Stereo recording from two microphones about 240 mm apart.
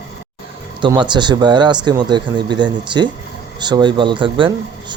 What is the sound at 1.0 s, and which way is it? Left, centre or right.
Speech, centre.